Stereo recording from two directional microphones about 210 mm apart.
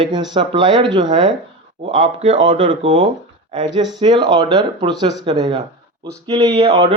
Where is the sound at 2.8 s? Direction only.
65° right (ahead or behind).